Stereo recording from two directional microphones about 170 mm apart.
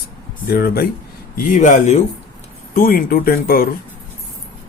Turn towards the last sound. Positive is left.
turn(degrees=60)  # may be behind; listen again after turning